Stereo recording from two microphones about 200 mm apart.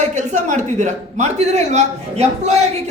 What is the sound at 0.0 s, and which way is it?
A man's voice, 35° right (ahead or behind).